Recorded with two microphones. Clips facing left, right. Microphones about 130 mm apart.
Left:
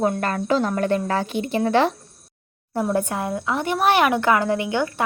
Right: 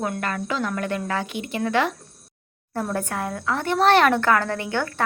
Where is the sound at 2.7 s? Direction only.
15° left (ahead or behind).